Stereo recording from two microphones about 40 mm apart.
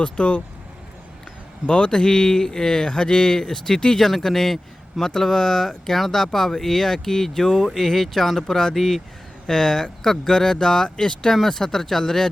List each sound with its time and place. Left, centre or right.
0.0 s speech: left
1.6 s a man's voice: left